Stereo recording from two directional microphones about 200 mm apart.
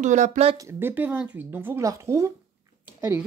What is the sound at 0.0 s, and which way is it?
Speech, 35° right (ahead or behind).